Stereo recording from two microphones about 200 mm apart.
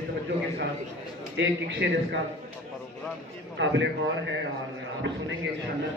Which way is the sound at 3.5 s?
65° right (ahead or behind).